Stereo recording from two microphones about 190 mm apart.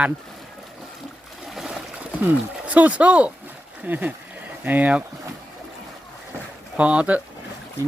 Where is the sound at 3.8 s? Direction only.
10° right (ahead or behind).